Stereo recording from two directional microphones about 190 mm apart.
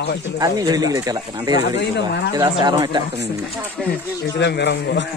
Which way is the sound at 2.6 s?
20° right (ahead or behind).